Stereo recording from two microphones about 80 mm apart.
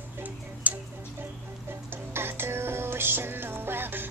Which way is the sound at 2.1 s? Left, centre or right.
Right.